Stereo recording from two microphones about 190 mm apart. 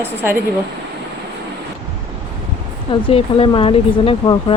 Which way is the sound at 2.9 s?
30° left (ahead or behind).